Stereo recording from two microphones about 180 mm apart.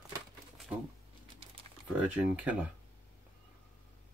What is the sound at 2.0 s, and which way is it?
Speech, 5° right (ahead or behind).